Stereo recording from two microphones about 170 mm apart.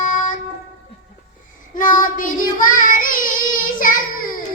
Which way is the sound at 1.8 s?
50° left (ahead or behind).